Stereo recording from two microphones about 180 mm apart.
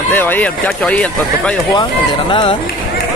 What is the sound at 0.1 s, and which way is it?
Speech, 10° left (ahead or behind).